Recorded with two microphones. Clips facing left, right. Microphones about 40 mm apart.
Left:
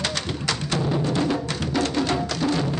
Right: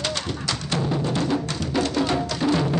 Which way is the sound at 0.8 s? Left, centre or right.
Centre.